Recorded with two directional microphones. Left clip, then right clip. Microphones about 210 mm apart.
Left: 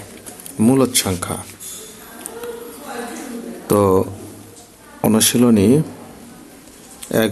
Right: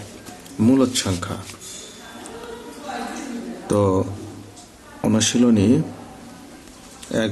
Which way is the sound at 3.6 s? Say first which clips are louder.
Left 5 dB; 25° left (ahead or behind).